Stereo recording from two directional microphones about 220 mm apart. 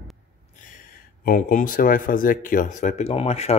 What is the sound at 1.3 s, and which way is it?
Speech, 35° left (ahead or behind).